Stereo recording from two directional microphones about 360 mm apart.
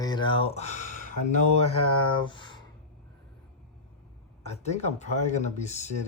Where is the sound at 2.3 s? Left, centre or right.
Centre.